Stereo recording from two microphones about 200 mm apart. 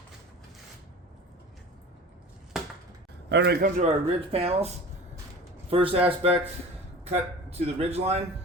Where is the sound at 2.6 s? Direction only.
Centre (ahead or behind).